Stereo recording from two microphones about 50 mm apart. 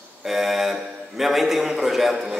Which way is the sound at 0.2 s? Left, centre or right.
Centre.